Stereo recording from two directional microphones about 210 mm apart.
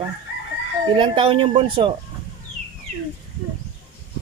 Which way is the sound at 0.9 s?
25° right (ahead or behind).